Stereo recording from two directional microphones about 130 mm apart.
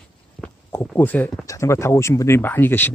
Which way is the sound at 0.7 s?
15° left (ahead or behind).